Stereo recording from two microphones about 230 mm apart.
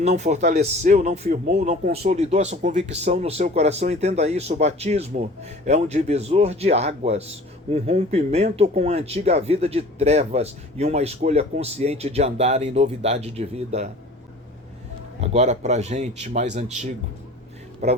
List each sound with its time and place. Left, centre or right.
0.0 s speech: right
15.2 s speech: right
17.8 s speech: right